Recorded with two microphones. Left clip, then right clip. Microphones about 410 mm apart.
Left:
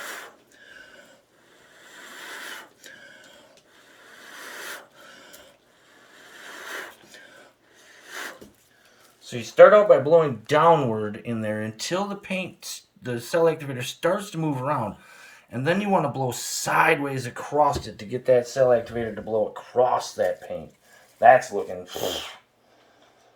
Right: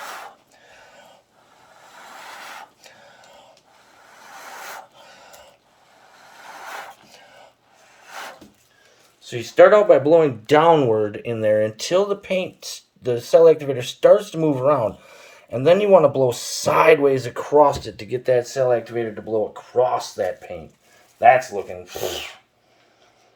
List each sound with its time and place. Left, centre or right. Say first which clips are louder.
9.2 s speech: right 1 dB; right